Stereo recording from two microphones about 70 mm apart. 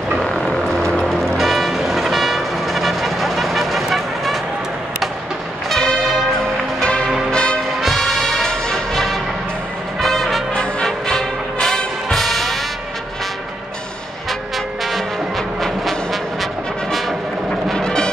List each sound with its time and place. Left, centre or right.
0.2 s vehicle: centre
5.7 s music: centre
6.8 s change ringing: centre
7.2 s music: centre
7.8 s music: centre
14.9 s music: centre
17.6 s music: centre